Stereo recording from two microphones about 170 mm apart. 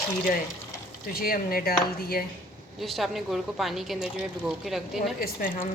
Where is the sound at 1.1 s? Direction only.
60° left (ahead or behind).